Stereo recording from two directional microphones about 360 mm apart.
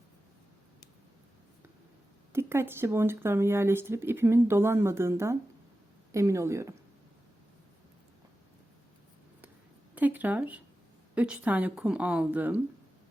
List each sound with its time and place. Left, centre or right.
2.3 s speech: centre
9.9 s a sound: centre
11.1 s speech: centre